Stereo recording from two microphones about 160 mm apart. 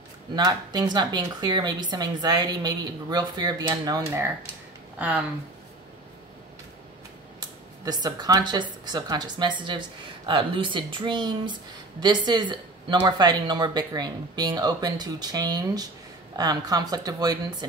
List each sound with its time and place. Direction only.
0.4 s speech: 25° right (ahead or behind); by 5.2 s 10° right (ahead or behind)
7.3 s speech: 25° right (ahead or behind)